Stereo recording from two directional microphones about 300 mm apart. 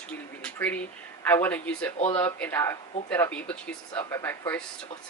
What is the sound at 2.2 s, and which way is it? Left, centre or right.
Speech, centre.